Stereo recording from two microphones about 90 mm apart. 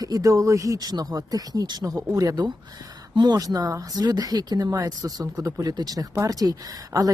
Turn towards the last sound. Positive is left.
turn(degrees=-45)  # may be behind; listen again after turning